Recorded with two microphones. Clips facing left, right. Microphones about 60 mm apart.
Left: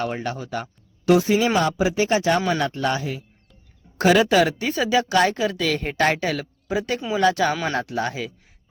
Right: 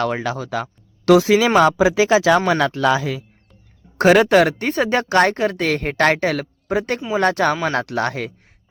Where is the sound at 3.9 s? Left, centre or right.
Right.